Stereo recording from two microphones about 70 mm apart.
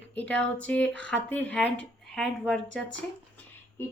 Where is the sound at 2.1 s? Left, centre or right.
Centre.